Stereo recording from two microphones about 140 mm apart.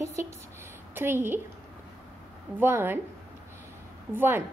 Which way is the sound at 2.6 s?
15° right (ahead or behind).